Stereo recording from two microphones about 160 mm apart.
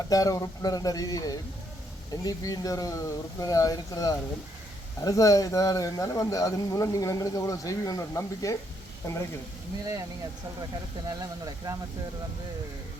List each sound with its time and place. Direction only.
0.1 s a man's voice: 20° left (ahead or behind)
11.1 s speech: 25° right (ahead or behind)